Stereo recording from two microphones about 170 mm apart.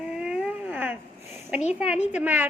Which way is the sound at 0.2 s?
5° right (ahead or behind).